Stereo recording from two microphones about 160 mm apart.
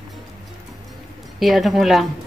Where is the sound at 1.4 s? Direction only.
Centre (ahead or behind).